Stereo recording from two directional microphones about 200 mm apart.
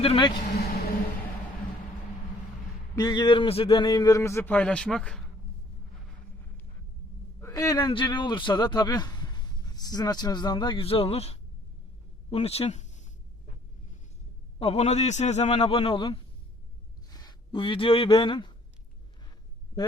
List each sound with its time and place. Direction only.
0.0 s a man's voice: 25° left (ahead or behind)
2.9 s a man's voice: 20° left (ahead or behind); by 5.2 s 5° left (ahead or behind)
7.4 s a man's voice: 15° left (ahead or behind); by 13.1 s 35° left (ahead or behind)
14.6 s a man's voice: 30° left (ahead or behind)